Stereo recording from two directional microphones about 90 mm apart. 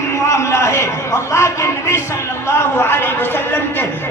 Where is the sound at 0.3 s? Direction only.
35° left (ahead or behind).